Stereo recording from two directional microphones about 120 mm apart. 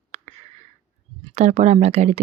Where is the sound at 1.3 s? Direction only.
70° right (ahead or behind).